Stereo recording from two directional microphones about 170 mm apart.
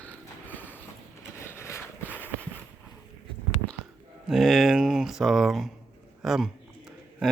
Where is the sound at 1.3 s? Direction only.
15° left (ahead or behind).